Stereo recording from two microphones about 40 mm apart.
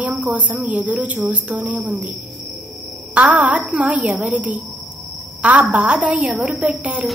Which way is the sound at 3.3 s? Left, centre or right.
Right.